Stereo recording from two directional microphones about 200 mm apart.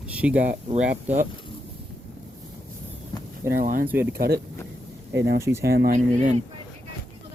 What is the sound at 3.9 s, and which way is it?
Speech, 10° right (ahead or behind).